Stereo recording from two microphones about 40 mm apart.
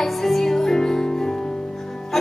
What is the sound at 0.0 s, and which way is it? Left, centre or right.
Music, centre.